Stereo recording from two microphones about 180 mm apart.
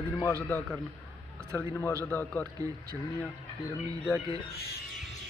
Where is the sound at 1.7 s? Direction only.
15° left (ahead or behind).